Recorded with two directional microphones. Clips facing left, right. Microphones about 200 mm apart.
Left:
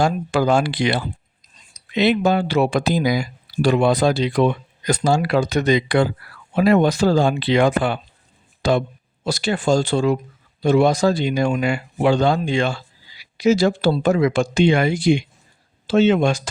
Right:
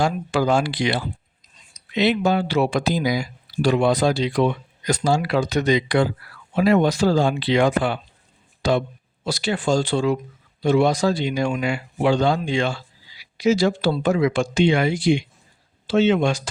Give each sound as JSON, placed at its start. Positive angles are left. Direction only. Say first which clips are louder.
{"t": 0.0, "sound": "speech", "louder": "left 2 dB", "side_deg": 50}